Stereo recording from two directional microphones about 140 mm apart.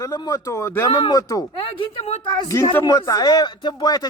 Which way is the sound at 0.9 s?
30° left (ahead or behind).